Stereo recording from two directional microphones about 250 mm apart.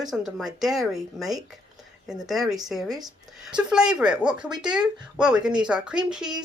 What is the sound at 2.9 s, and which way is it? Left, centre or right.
Speech, centre.